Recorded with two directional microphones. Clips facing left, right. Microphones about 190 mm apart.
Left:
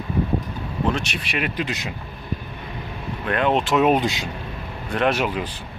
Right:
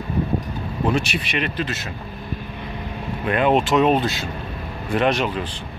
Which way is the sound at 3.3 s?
5° right (ahead or behind).